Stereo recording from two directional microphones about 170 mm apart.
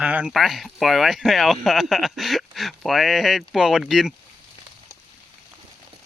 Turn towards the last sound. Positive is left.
turn(degrees=0)  # may be behind; listen again after turning